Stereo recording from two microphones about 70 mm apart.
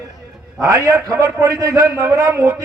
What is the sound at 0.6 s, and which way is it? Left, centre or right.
A man's voice, right.